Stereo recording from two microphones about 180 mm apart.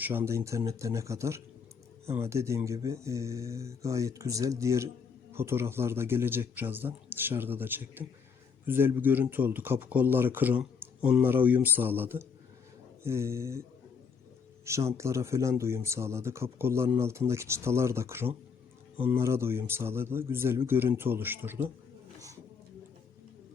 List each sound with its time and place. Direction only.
0.0 s speech: 10° right (ahead or behind)
14.6 s speech: 15° right (ahead or behind)